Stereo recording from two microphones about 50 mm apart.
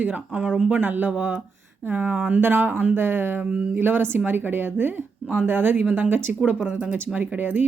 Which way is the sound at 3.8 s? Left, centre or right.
Right.